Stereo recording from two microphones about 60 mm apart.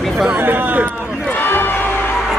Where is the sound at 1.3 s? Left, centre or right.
Left.